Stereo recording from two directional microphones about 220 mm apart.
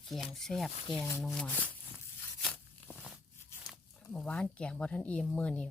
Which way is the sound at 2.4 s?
Centre (ahead or behind).